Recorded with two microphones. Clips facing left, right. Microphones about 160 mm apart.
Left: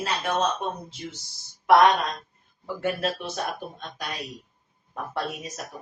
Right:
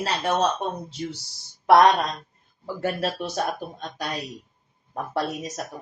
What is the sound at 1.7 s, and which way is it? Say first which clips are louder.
Speech: right 2 dB; 35° right (ahead or behind).